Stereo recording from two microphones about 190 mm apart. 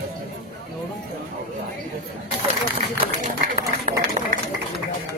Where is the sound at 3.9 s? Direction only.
35° right (ahead or behind).